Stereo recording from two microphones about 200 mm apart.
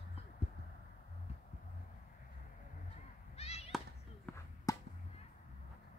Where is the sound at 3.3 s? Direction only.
30° left (ahead or behind).